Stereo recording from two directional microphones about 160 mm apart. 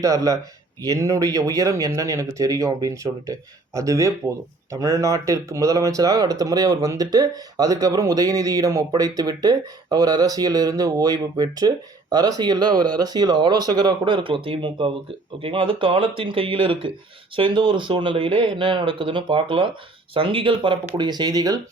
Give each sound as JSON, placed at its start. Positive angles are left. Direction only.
{"t": 0.0, "sound": "speech", "side_deg": -20}